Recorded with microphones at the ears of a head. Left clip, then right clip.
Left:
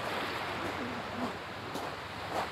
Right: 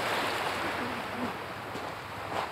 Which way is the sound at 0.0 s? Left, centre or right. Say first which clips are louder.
Right 5 dB; right.